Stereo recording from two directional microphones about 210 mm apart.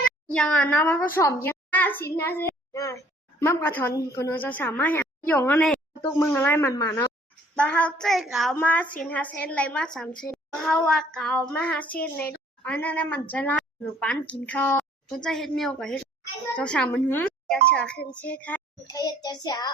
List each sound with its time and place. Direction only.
0.0 s a child's voice: 5° left (ahead or behind)
2.4 s a sound: 15° left (ahead or behind)
3.4 s a woman's voice: 10° left (ahead or behind)
18.9 s child singing: 20° left (ahead or behind)